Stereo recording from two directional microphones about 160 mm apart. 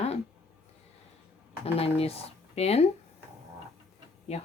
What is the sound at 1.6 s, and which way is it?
Speech, 40° left (ahead or behind).